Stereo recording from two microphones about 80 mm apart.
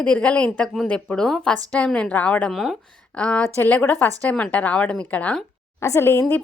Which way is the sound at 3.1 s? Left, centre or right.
Centre.